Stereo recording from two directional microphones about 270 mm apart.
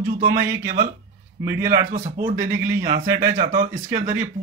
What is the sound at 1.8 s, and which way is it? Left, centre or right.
Speech, right.